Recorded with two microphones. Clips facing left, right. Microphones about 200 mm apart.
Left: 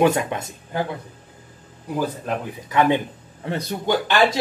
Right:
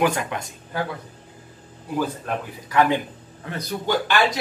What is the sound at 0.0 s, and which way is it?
Speech, 25° left (ahead or behind).